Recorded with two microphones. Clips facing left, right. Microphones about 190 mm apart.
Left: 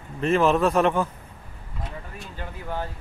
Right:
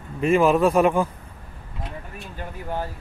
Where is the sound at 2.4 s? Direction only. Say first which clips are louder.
Right 2 dB; 15° right (ahead or behind).